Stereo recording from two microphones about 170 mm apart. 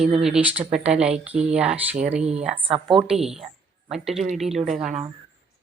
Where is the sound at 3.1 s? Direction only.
Centre (ahead or behind).